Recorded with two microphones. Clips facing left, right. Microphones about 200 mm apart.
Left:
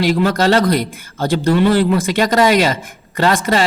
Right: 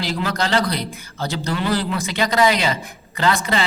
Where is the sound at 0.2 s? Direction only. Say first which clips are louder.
Left 7 dB; 50° left (ahead or behind).